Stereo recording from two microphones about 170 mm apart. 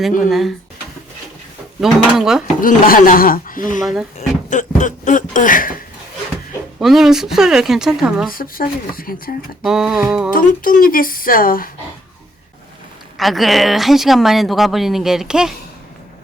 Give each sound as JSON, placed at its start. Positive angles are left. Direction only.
{"t": 0.2, "sound": "speech", "side_deg": 0}
{"t": 1.8, "sound": "speech", "side_deg": 0}
{"t": 2.6, "sound": "speech", "side_deg": 55}
{"t": 3.8, "sound": "speech", "side_deg": 0}
{"t": 4.4, "sound": "speech", "side_deg": 45}
{"t": 6.7, "sound": "speech", "side_deg": 0}
{"t": 8.3, "sound": "speech", "side_deg": 55}
{"t": 9.6, "sound": "speech", "side_deg": -5}
{"t": 10.3, "sound": "speech", "side_deg": 55}
{"t": 13.1, "sound": "speech", "side_deg": 0}